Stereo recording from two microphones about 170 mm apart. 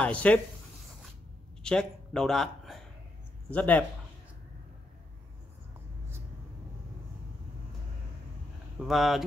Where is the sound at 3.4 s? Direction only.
10° left (ahead or behind).